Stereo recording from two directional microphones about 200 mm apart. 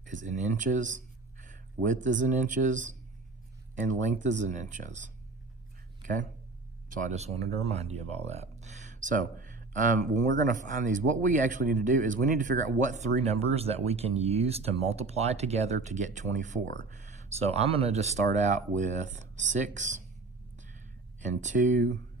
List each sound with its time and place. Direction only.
0.0 s speech: 40° right (ahead or behind)
6.9 s speech: 40° right (ahead or behind)
21.3 s speech: 40° right (ahead or behind)